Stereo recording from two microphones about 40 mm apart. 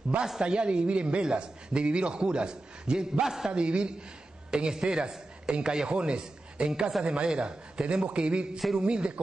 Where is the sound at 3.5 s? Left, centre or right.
Right.